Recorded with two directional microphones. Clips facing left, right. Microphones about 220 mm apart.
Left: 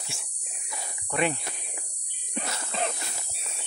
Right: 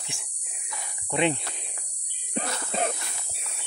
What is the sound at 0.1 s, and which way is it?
Speech, 15° right (ahead or behind).